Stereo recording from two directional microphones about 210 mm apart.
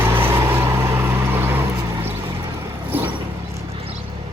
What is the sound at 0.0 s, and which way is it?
Vehicle, 10° right (ahead or behind).